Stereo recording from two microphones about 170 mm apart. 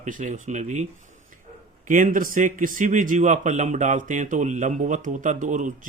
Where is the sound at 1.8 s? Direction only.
50° right (ahead or behind).